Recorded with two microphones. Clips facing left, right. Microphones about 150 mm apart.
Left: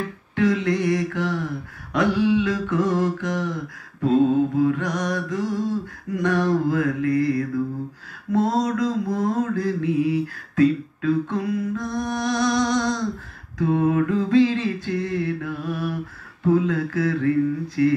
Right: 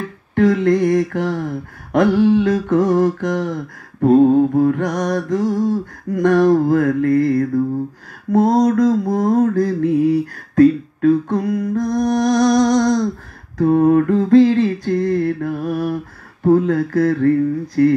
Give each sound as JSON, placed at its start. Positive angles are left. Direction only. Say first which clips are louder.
{"t": 0.4, "sound": "mantra", "louder": "right 7 dB", "side_deg": -45}